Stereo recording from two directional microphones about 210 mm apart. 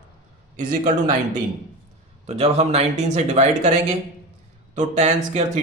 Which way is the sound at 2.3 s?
30° right (ahead or behind).